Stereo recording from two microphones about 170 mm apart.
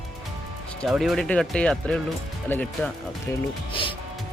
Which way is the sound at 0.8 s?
Centre (ahead or behind).